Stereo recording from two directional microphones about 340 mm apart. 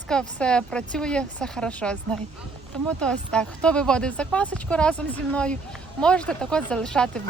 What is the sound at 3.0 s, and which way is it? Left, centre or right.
Speech, centre.